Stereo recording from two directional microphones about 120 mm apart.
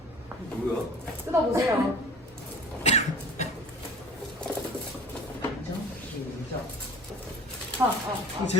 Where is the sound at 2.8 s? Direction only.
75° left (ahead or behind).